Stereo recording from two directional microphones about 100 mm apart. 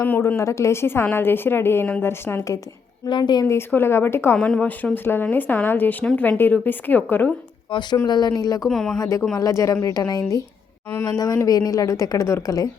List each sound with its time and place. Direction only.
0.0 s a woman's voice: 20° left (ahead or behind)
3.1 s a woman's voice: 50° left (ahead or behind)
3.7 s a woman's voice: 25° left (ahead or behind)
4.4 s a woman's voice: 10° left (ahead or behind)
7.7 s a woman's voice: 50° left (ahead or behind)
8.6 s speech: 5° left (ahead or behind)
9.0 s a woman's voice: 35° left (ahead or behind)
11.4 s a woman's voice: 40° left (ahead or behind)